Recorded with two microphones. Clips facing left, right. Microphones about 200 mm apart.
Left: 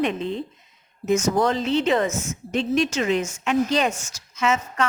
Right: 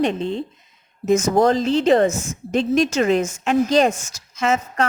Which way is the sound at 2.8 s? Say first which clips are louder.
Right 5 dB; 45° right (ahead or behind).